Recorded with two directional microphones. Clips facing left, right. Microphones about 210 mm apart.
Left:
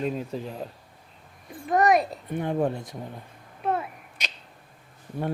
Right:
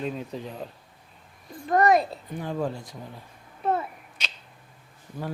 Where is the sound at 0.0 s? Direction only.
5° left (ahead or behind).